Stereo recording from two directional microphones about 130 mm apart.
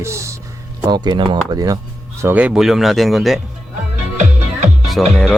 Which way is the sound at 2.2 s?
10° right (ahead or behind).